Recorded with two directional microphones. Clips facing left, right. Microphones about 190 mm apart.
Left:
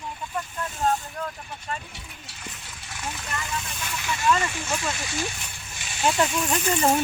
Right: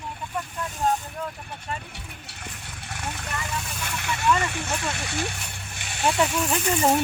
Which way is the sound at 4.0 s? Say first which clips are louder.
Even; 60° right (ahead or behind).